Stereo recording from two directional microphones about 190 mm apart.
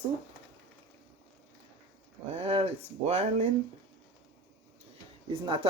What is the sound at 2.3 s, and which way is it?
Speech, 30° right (ahead or behind).